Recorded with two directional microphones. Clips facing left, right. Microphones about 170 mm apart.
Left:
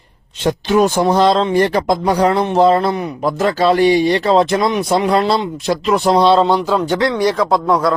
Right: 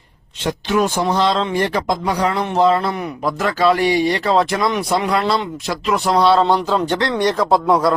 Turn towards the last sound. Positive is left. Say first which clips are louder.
# even
turn(degrees=0)  # may be behind; listen again after turning